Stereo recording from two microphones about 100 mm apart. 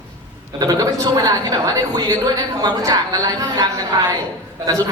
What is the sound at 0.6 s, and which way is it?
A man's voice, 40° right (ahead or behind).